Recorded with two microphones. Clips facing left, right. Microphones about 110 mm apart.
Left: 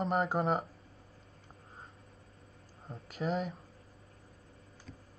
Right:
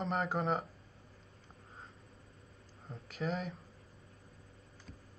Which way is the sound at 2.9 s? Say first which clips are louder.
Left 3 dB; 30° left (ahead or behind).